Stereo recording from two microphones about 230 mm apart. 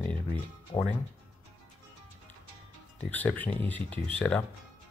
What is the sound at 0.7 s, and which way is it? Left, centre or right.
Speech, centre.